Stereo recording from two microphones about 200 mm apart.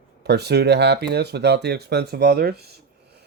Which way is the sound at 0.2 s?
55° right (ahead or behind).